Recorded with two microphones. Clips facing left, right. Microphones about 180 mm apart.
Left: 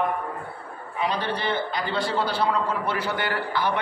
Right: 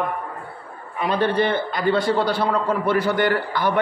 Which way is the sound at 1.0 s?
55° right (ahead or behind).